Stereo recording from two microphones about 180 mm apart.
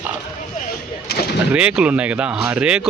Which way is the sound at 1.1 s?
60° left (ahead or behind).